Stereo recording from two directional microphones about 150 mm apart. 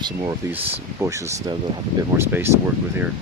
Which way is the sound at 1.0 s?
20° right (ahead or behind).